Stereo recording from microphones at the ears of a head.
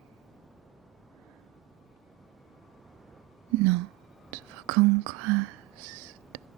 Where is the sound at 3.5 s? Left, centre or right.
Right.